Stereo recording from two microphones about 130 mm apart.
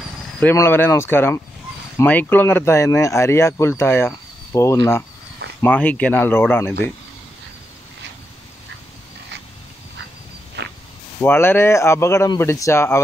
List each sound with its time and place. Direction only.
0.4 s speech: 15° left (ahead or behind)
11.1 s speech: 15° left (ahead or behind)